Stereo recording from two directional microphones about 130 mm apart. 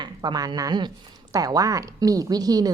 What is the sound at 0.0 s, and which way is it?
Speech, 35° right (ahead or behind).